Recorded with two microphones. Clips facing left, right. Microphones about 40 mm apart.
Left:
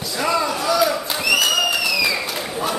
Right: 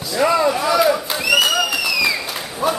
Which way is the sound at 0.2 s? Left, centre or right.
Centre.